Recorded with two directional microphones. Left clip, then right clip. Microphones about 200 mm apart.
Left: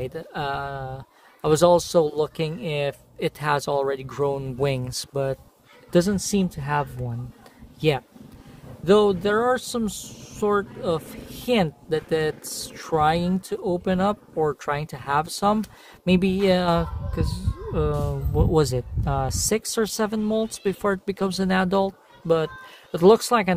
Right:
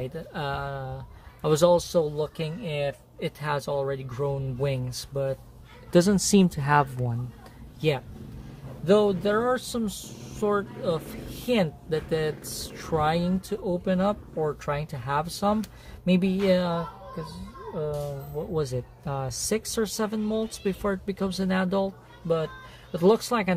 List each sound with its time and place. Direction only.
0.0 s speech: 30° left (ahead or behind)
5.9 s a woman's voice: 5° right (ahead or behind)
6.1 s speech: 20° right (ahead or behind)
7.8 s speech: 20° left (ahead or behind)
8.8 s speech: 40° left (ahead or behind)
18.5 s speech: 25° left (ahead or behind)